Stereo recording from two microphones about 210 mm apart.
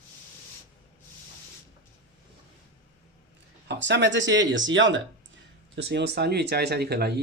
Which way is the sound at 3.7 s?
55° right (ahead or behind).